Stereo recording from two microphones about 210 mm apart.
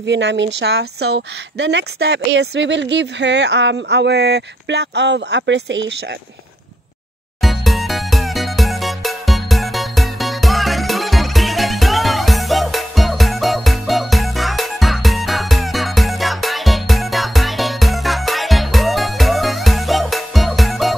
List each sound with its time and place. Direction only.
0.0 s a woman's voice: 60° right (ahead or behind)
7.4 s music: centre (ahead or behind)